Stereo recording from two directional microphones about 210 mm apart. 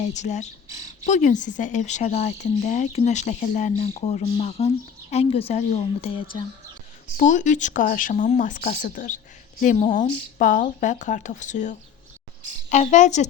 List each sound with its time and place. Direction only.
0.1 s a woman's voice: 35° left (ahead or behind)
7.2 s speech: 35° left (ahead or behind)
10.3 s speech: 40° left (ahead or behind)